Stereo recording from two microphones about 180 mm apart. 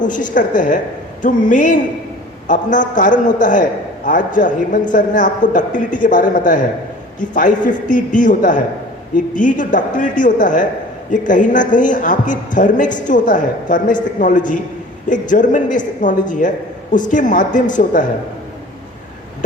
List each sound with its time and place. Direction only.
0.0 s a man's voice: 45° left (ahead or behind)